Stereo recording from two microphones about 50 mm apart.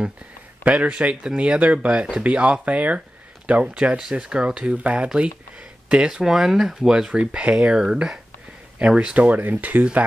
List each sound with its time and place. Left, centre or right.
0.7 s speech: right